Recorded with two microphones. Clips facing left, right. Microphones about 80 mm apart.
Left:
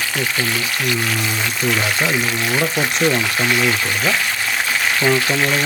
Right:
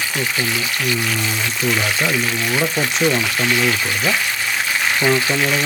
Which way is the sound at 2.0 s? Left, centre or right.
Centre.